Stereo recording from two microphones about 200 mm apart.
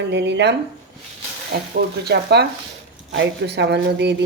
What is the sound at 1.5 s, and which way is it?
Speech, 50° right (ahead or behind).